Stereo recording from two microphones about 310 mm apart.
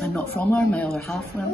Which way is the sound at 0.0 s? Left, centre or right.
Centre.